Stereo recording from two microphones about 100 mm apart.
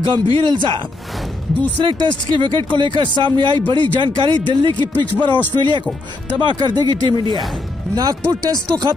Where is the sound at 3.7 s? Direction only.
55° left (ahead or behind).